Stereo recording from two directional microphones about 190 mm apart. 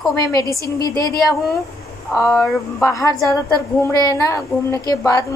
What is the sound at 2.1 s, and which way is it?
Speech, centre (ahead or behind).